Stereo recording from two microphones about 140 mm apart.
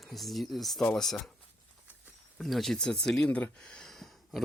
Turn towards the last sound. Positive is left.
turn(degrees=0)  # may be behind; listen again after turning